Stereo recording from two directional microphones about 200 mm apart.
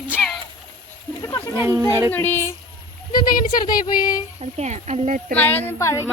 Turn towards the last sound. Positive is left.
turn(degrees=15)  # may be behind; listen again after turning